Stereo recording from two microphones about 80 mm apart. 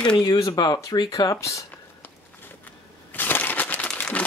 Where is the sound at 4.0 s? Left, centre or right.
Centre.